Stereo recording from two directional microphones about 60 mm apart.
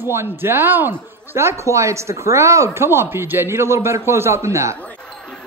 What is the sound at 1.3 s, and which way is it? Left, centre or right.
Speech, right.